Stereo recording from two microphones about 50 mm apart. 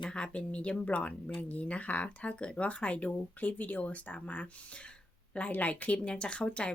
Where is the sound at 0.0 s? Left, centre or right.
Left.